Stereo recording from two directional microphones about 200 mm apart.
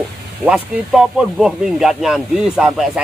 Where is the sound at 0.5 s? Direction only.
5° right (ahead or behind).